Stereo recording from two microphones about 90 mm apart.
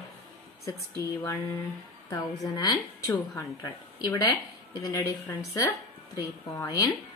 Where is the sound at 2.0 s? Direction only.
45° left (ahead or behind).